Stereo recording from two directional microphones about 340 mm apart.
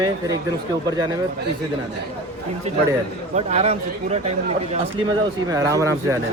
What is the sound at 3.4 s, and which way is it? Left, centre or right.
Speech, centre.